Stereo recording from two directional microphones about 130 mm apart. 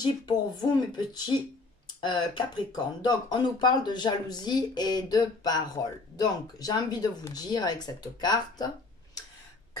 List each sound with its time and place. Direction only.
0.0 s speech: 35° left (ahead or behind)